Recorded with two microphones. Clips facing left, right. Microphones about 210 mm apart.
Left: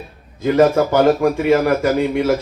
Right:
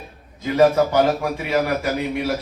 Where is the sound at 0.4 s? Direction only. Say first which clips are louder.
Left 2 dB; 55° left (ahead or behind).